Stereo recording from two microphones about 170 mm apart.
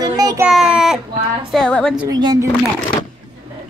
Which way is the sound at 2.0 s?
25° right (ahead or behind).